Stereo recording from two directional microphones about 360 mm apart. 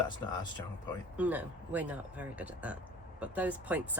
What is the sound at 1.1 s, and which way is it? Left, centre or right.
Speech, centre.